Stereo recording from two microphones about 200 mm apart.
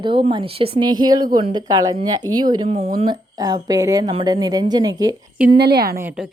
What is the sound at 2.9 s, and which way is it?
Speech, 25° right (ahead or behind).